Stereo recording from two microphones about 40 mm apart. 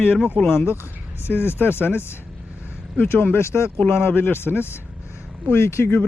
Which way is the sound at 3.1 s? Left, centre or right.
Left.